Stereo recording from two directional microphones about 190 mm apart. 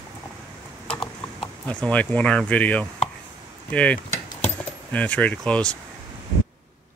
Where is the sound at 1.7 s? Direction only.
5° left (ahead or behind).